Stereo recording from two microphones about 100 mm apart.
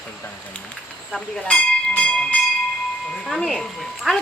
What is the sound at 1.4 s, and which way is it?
Bell, 10° left (ahead or behind).